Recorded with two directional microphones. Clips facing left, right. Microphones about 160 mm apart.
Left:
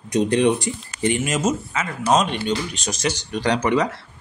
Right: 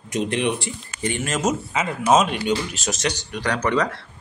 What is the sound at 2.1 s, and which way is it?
Speech, 5° right (ahead or behind).